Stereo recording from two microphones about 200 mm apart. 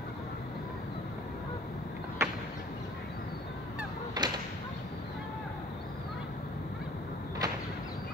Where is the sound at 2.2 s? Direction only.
15° right (ahead or behind).